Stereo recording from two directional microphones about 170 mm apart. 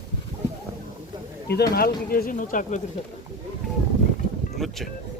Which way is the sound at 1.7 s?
60° left (ahead or behind).